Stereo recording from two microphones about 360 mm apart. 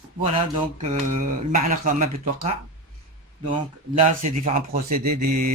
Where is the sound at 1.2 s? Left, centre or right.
Right.